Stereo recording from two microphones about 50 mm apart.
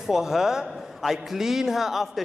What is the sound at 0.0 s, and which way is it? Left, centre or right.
A man's voice, centre.